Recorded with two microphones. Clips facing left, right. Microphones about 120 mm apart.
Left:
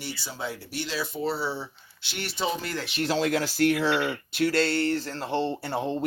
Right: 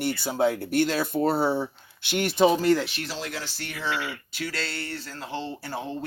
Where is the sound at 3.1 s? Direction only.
65° left (ahead or behind).